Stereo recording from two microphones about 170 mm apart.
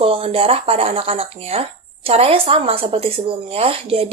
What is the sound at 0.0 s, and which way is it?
Speech, 35° right (ahead or behind).